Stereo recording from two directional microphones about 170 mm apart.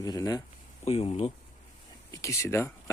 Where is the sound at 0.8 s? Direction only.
40° left (ahead or behind).